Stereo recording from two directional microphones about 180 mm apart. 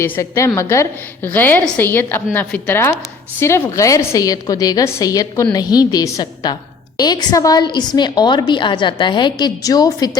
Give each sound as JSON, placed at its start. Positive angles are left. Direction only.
{"t": 0.0, "sound": "a woman's voice", "side_deg": 15}